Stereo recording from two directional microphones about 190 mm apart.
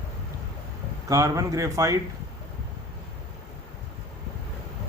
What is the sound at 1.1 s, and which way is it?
Speech, 15° right (ahead or behind).